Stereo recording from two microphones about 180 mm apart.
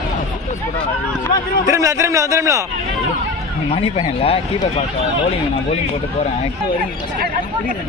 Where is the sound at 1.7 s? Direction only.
15° right (ahead or behind).